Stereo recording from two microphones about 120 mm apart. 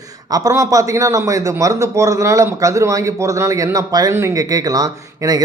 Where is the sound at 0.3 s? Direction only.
30° right (ahead or behind).